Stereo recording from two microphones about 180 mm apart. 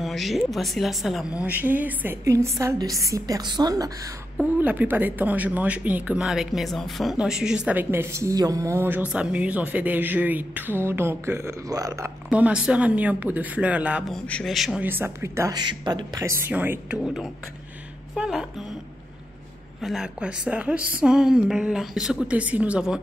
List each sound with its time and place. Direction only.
0.0 s speech: centre (ahead or behind); by 3.9 s 20° right (ahead or behind)
4.4 s speech: 10° right (ahead or behind)
12.3 s a woman's voice: 5° right (ahead or behind)
19.8 s a woman's voice: 5° right (ahead or behind)